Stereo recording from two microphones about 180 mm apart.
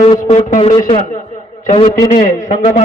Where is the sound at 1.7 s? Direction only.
30° left (ahead or behind).